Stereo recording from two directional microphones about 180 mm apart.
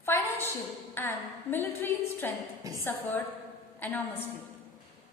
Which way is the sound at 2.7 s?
20° right (ahead or behind).